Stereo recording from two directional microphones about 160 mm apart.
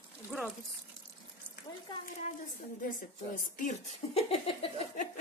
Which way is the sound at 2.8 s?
60° left (ahead or behind).